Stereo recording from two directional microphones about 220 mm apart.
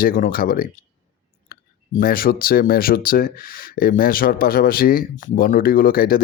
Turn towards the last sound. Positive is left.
turn(degrees=40)  # may be behind; listen again after turning